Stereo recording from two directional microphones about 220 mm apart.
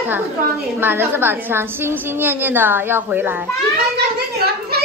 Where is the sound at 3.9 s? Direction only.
45° right (ahead or behind).